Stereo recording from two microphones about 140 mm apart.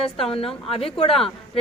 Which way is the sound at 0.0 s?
40° left (ahead or behind).